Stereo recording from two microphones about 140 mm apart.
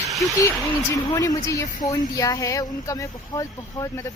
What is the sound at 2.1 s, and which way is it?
Speech, 25° left (ahead or behind).